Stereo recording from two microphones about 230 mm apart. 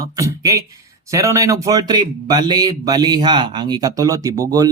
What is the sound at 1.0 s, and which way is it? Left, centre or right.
A man's voice, centre.